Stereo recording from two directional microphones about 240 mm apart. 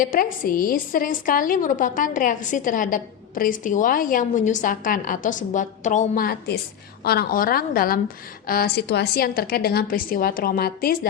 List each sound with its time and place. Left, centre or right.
0.0 s a woman's voice: left